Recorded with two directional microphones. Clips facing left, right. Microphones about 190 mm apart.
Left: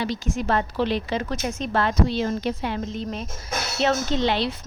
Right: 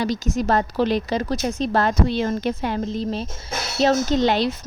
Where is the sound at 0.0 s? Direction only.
40° right (ahead or behind).